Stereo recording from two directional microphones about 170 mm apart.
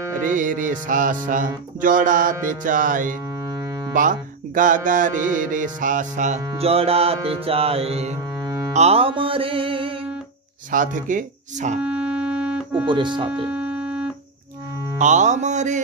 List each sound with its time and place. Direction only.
0.3 s mantra: 50° right (ahead or behind)
6.4 s music: 30° right (ahead or behind)
10.7 s mantra: 50° right (ahead or behind)
11.8 s music: 5° right (ahead or behind)
12.8 s speech: 30° right (ahead or behind)
13.5 s keyboard: 10° right (ahead or behind)
15.0 s mantra: 45° right (ahead or behind)